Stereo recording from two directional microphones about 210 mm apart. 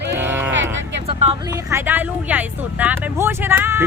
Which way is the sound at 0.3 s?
10° right (ahead or behind).